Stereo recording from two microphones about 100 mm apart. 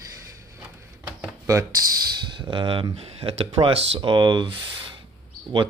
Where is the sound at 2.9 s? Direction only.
90° right.